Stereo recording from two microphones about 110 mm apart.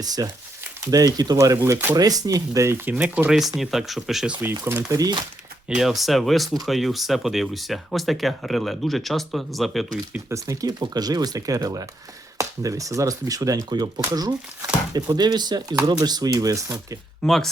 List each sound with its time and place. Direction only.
0.0 s speech: 35° right (ahead or behind); by 4.4 s 5° right (ahead or behind)
4.9 s speech: 35° right (ahead or behind)
5.6 s speech: 5° right (ahead or behind)
10.1 s speech: 25° right (ahead or behind)
17.2 s speech: 5° left (ahead or behind)